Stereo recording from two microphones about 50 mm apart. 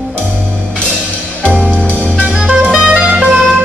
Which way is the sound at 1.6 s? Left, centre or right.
Left.